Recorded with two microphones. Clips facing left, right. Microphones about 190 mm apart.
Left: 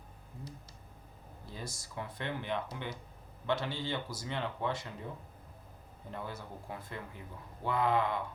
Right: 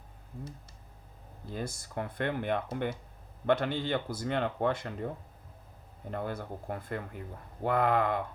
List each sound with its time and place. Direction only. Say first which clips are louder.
1.5 s speech: right 7 dB; 55° right (ahead or behind)